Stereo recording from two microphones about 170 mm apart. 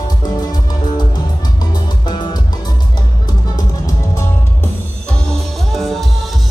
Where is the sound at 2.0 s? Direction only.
25° left (ahead or behind).